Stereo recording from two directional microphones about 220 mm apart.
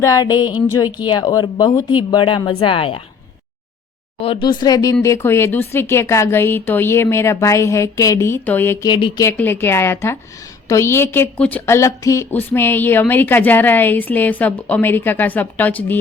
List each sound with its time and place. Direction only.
0.0 s a woman's voice: 15° left (ahead or behind)
4.2 s a woman's voice: 25° left (ahead or behind); by 16.0 s 10° left (ahead or behind)